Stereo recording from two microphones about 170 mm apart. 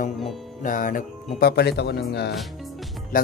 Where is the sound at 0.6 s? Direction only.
50° left (ahead or behind); by 2.3 s 75° left (ahead or behind).